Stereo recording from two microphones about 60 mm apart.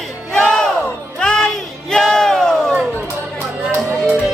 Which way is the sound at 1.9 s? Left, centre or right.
Centre.